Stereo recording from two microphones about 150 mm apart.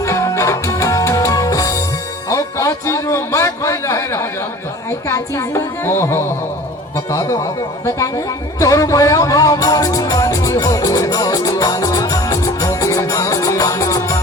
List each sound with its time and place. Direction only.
0.0 s music: 20° left (ahead or behind)
4.9 s a woman's voice: 20° left (ahead or behind)
8.5 s music: 20° left (ahead or behind)